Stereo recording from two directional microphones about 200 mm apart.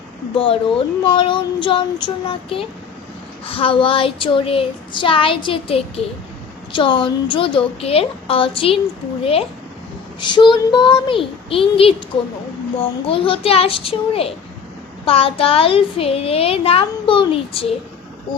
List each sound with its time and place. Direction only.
0.3 s a woman's voice: 25° left (ahead or behind)
10.2 s a woman's voice: 25° left (ahead or behind)